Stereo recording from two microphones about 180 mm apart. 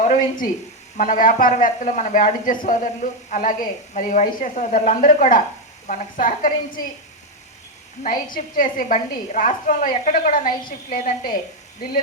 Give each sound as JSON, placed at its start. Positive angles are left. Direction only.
{"t": 0.0, "sound": "a woman's voice", "side_deg": 45}
{"t": 8.0, "sound": "a woman's voice", "side_deg": 50}